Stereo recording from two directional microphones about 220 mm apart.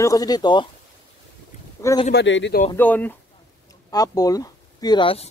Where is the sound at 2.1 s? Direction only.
55° left (ahead or behind).